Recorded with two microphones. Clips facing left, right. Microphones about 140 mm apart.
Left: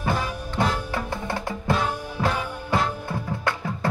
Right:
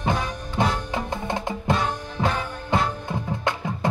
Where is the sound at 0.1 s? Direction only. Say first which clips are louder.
Even; 5° left (ahead or behind).